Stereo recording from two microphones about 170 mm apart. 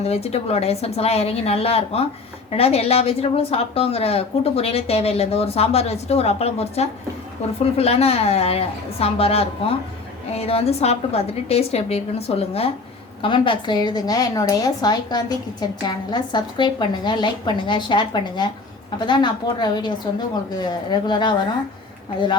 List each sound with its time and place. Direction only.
0.0 s a woman's voice: 40° left (ahead or behind)